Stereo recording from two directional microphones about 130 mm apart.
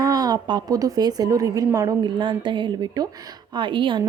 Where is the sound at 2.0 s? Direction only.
40° right (ahead or behind).